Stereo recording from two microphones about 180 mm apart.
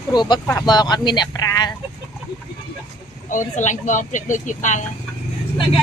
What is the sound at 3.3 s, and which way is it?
Speech, 45° left (ahead or behind).